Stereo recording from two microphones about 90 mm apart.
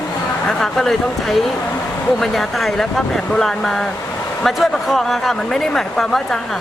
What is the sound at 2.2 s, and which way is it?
Speech, 5° left (ahead or behind).